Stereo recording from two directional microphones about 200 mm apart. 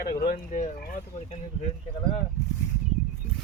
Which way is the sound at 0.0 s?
50° left (ahead or behind).